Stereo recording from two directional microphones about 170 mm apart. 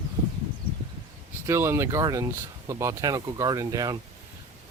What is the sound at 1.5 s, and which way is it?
Speech, 15° right (ahead or behind).